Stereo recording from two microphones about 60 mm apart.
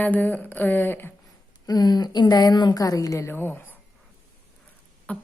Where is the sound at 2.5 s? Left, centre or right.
Left.